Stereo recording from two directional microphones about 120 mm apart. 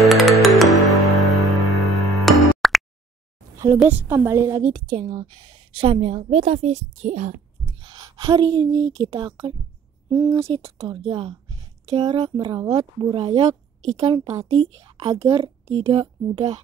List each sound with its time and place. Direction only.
0.0 s music: centre (ahead or behind)
3.5 s a sound: 25° right (ahead or behind)
3.8 s a woman's voice: 15° right (ahead or behind); by 7.3 s 75° right (ahead or behind)
7.6 s a sound: 40° right (ahead or behind)
9.0 s speech: 50° right (ahead or behind)
10.0 s speech: 35° right (ahead or behind)
11.1 s speech: 45° right (ahead or behind)
12.0 s speech: 35° right (ahead or behind)
14.0 s a woman's voice: 30° right (ahead or behind)